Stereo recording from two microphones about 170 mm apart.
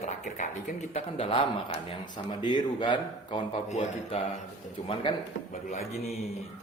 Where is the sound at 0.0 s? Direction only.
45° left (ahead or behind).